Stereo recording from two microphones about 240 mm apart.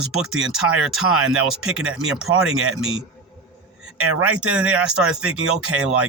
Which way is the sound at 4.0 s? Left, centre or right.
Right.